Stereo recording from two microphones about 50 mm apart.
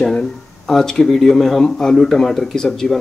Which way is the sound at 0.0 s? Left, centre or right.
Centre.